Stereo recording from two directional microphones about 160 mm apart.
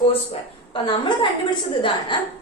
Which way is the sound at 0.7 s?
30° left (ahead or behind).